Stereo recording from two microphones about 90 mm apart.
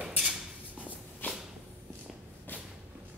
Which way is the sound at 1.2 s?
20° left (ahead or behind).